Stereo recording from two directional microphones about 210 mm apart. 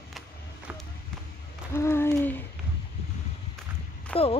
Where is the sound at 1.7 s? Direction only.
10° left (ahead or behind).